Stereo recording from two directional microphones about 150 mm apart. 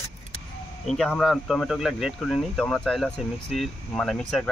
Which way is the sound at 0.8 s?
5° left (ahead or behind).